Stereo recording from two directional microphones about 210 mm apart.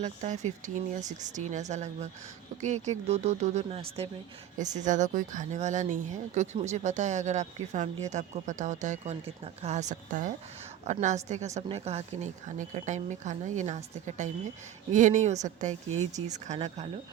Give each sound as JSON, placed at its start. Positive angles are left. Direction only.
{"t": 0.0, "sound": "speech", "side_deg": -35}